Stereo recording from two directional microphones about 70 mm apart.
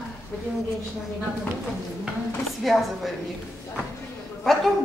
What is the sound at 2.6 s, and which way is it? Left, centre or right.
Speech, centre.